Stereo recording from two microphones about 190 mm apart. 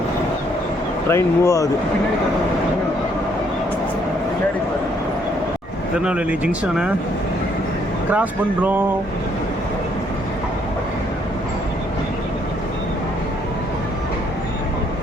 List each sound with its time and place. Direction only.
1.1 s speech: 15° left (ahead or behind)
6.1 s speech: 5° right (ahead or behind)
8.1 s speech: 10° right (ahead or behind)